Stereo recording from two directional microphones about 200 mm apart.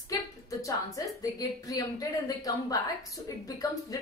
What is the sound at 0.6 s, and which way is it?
A woman's voice, 15° left (ahead or behind).